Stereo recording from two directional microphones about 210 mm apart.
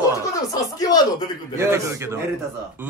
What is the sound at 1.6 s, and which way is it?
Speech, 15° right (ahead or behind).